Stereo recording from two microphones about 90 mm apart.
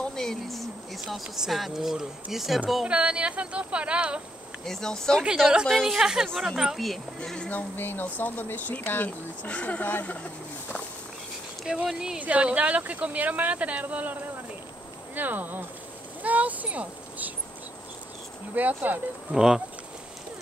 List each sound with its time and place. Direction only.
0.0 s a sound: 5° left (ahead or behind)
1.0 s speech: 5° right (ahead or behind)
4.6 s speech: 5° left (ahead or behind)
5.2 s speech: 10° right (ahead or behind)
7.2 s speech: 10° left (ahead or behind)
11.6 s speech: 5° right (ahead or behind)
15.1 s speech: 20° right (ahead or behind)
18.5 s speech: 20° right (ahead or behind)
19.3 s speech: 5° right (ahead or behind)